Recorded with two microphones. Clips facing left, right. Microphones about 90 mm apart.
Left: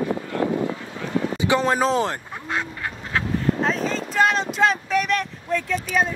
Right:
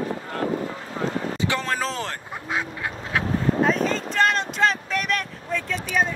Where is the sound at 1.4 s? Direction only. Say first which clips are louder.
Left 7 dB; 20° left (ahead or behind).